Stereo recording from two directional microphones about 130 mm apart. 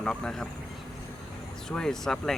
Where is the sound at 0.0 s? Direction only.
5° left (ahead or behind).